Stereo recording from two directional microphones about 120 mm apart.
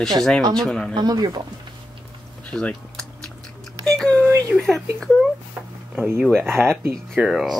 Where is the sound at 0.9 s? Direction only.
35° right (ahead or behind).